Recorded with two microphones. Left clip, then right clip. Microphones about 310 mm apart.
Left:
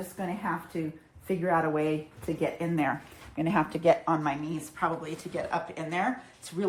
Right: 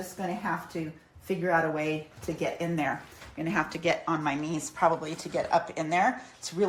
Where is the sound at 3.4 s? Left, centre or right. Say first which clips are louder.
Left 2 dB; left.